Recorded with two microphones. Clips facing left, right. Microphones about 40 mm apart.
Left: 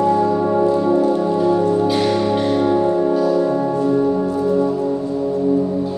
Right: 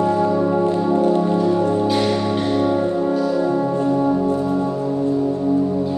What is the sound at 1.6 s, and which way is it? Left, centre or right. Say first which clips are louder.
Music: left 2 dB; right.